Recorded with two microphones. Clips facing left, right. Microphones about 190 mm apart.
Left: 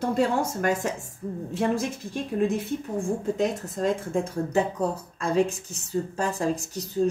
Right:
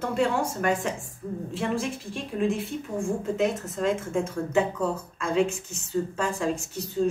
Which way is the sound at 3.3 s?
35° left (ahead or behind).